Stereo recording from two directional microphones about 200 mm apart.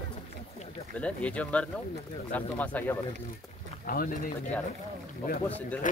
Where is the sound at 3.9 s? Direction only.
45° left (ahead or behind).